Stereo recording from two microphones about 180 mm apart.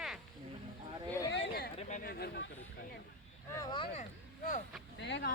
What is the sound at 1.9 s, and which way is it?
Speech, 55° left (ahead or behind).